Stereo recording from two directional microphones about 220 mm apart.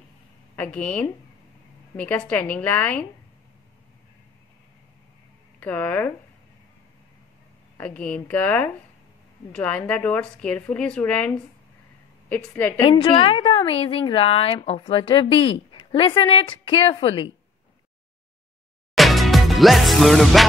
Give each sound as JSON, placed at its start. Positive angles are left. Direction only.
{"t": 0.6, "sound": "a woman's voice", "side_deg": 5}
{"t": 5.6, "sound": "a woman's voice", "side_deg": 10}
{"t": 7.7, "sound": "a woman's voice", "side_deg": 5}
{"t": 12.8, "sound": "a woman's voice", "side_deg": 25}
{"t": 18.9, "sound": "music", "side_deg": 0}